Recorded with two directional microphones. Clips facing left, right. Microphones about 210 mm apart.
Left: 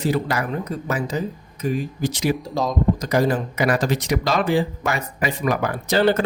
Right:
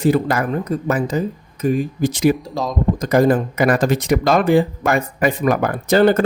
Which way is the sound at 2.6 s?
Centre (ahead or behind).